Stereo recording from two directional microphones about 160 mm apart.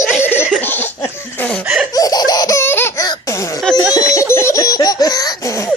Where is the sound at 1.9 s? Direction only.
20° left (ahead or behind).